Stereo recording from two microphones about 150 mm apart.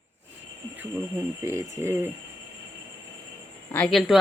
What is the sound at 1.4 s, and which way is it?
Speech, 20° right (ahead or behind).